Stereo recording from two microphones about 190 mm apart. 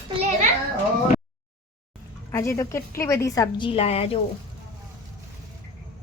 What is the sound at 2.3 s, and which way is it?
A woman's voice, 15° left (ahead or behind).